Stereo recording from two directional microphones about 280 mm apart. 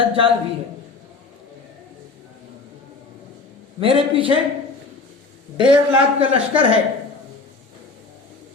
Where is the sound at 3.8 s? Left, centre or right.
Centre.